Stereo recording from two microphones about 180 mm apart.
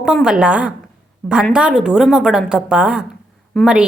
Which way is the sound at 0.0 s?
5° right (ahead or behind).